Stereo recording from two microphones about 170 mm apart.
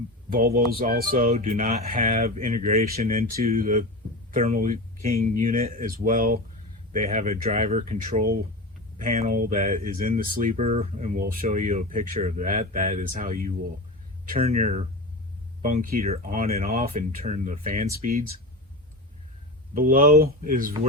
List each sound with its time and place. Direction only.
0.3 s speech: 60° right (ahead or behind)
1.3 s speech: 40° right (ahead or behind)
2.9 s speech: 55° right (ahead or behind)
14.3 s speech: 40° right (ahead or behind)
19.7 s speech: 55° right (ahead or behind)